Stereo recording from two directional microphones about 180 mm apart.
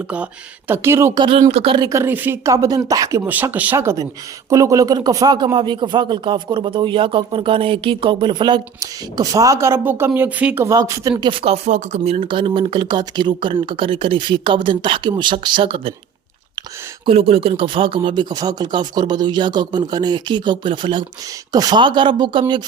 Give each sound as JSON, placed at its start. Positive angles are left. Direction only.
{"t": 0.7, "sound": "speech", "side_deg": -15}
{"t": 1.4, "sound": "speech", "side_deg": -35}
{"t": 11.2, "sound": "speech", "side_deg": -30}
{"t": 17.1, "sound": "speech", "side_deg": -30}